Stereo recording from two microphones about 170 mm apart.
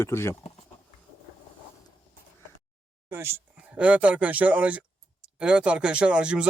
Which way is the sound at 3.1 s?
15° right (ahead or behind).